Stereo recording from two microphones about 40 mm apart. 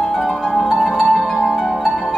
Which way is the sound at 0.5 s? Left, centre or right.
Centre.